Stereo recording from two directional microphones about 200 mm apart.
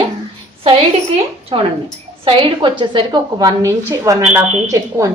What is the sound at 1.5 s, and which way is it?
A woman's voice, 25° right (ahead or behind).